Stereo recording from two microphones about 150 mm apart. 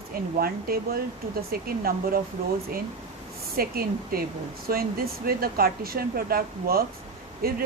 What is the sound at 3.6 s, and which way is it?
A woman's voice, 80° right.